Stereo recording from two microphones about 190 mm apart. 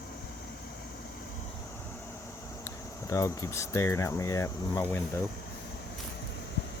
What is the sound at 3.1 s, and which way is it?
Speech, 15° left (ahead or behind).